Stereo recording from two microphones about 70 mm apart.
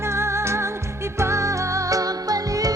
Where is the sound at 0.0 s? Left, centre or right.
Right.